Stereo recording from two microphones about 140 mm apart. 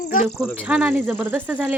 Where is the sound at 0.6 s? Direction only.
10° right (ahead or behind).